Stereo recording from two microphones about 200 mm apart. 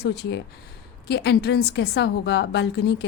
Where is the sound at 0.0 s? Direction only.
55° left (ahead or behind).